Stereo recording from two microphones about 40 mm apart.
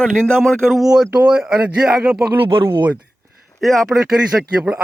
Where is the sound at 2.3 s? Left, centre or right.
Right.